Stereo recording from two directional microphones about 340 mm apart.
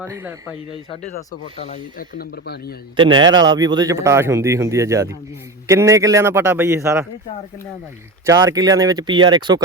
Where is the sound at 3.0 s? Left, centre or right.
Centre.